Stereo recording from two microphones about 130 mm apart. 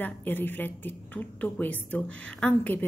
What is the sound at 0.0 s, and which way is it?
A woman's voice, 15° left (ahead or behind).